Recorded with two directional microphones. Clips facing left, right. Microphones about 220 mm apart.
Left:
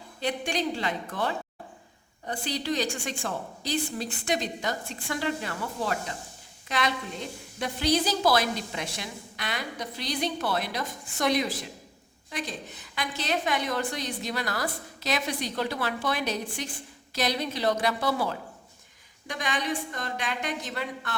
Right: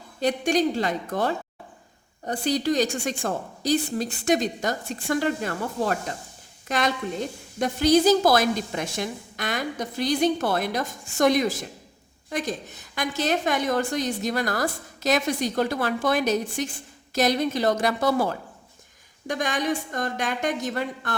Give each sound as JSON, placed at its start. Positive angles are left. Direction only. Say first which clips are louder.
{"t": 0.2, "sound": "a woman's voice", "louder": "right 7 dB", "side_deg": -45}